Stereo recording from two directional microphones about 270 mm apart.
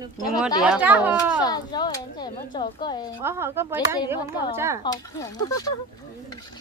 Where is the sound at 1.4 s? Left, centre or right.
Centre.